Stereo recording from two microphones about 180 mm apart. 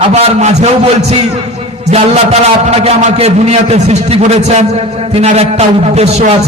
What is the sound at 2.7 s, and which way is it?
A man's voice, 35° right (ahead or behind).